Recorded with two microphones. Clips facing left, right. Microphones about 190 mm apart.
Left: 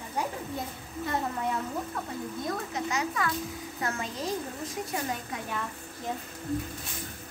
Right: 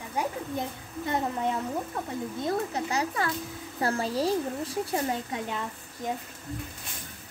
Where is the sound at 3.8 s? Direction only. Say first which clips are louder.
Right 7 dB; 35° right (ahead or behind).